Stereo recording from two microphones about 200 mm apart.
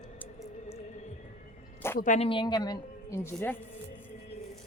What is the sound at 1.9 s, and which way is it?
Speech, 40° left (ahead or behind).